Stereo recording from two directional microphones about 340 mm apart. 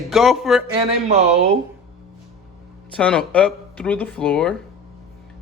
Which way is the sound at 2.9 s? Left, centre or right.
Centre.